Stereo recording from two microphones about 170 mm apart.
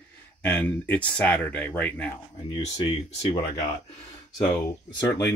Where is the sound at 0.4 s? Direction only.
10° left (ahead or behind).